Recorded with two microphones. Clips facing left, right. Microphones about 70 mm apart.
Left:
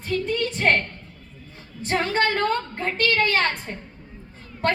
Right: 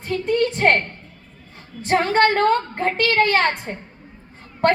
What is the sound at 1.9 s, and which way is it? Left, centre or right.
Speech, right.